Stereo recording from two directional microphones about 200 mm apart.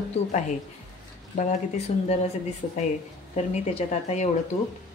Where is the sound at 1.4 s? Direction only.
35° left (ahead or behind).